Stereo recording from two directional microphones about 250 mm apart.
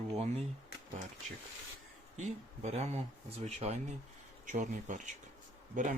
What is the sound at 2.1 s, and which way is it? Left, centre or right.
Speech, right.